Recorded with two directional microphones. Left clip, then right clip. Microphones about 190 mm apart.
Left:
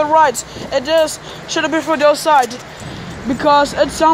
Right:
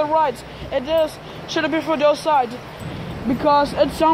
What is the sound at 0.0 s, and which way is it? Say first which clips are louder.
Speech: left 6 dB; 10° left (ahead or behind).